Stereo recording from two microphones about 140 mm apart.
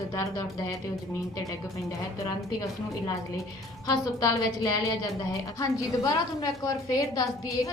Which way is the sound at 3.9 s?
25° left (ahead or behind).